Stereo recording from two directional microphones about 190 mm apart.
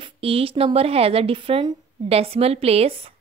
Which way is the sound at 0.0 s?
30° right (ahead or behind).